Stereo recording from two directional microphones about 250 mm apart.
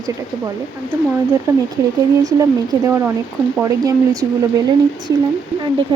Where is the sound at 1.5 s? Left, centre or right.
Centre.